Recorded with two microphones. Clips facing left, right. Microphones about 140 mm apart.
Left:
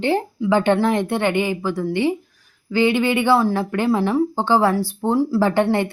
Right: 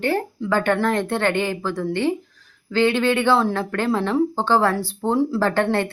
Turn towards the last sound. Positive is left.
turn(degrees=15)  # may be behind; listen again after turning